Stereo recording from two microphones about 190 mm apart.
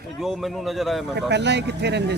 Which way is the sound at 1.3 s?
65° right (ahead or behind).